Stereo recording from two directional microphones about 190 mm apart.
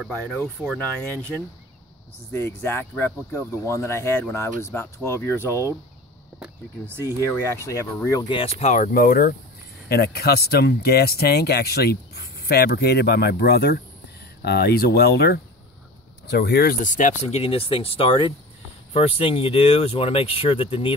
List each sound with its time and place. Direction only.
0.0 s speech: centre (ahead or behind)
2.3 s speech: 10° left (ahead or behind)
7.0 s speech: 15° right (ahead or behind)
7.6 s speech: 15° left (ahead or behind)